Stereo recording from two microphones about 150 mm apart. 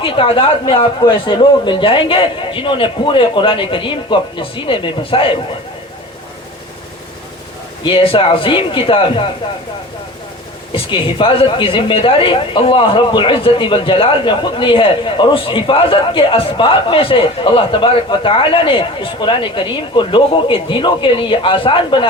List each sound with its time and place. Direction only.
0.0 s a woman's voice: 35° left (ahead or behind)
7.9 s a woman's voice: 35° left (ahead or behind)
10.7 s a woman's voice: 35° left (ahead or behind)